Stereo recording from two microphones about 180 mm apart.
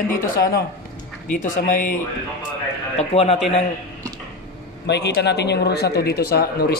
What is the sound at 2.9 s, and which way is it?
Speech, 35° left (ahead or behind).